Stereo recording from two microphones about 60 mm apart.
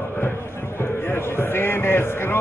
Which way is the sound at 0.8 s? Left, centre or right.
Left.